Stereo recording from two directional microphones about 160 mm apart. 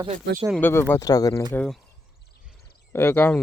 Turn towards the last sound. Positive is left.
turn(degrees=10)  # may be behind; listen again after turning